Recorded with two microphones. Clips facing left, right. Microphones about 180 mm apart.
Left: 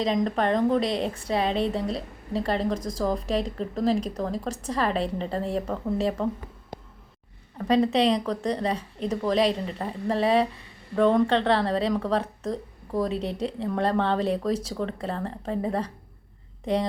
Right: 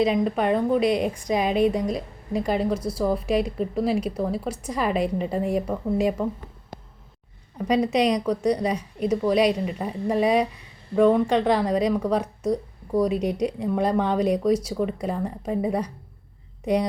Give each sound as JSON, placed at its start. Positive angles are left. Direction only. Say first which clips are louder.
{"t": 0.0, "sound": "a woman's voice", "louder": "right 3 dB", "side_deg": -10}
{"t": 7.6, "sound": "a woman's voice", "louder": "even", "side_deg": -10}